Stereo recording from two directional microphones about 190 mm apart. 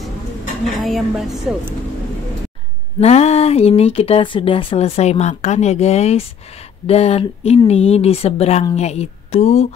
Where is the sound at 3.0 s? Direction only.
35° left (ahead or behind).